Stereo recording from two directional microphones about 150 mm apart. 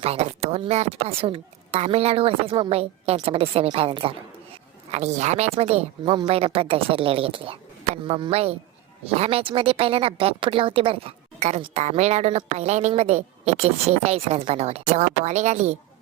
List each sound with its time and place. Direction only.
0.0 s speech: 45° right (ahead or behind)
4.9 s a woman's voice: 50° right (ahead or behind)